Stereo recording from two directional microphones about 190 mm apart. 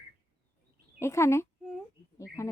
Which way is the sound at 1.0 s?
15° left (ahead or behind).